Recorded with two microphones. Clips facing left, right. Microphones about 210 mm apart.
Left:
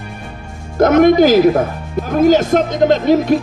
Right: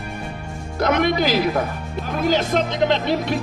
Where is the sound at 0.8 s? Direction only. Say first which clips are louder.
Left 10 dB; 45° left (ahead or behind).